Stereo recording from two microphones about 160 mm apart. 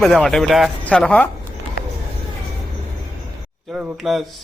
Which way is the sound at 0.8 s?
5° left (ahead or behind).